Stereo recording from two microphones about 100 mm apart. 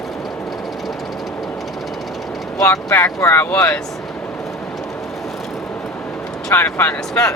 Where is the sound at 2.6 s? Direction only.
35° left (ahead or behind).